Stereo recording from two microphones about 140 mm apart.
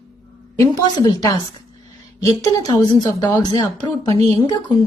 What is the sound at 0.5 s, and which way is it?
A woman's voice, 25° left (ahead or behind).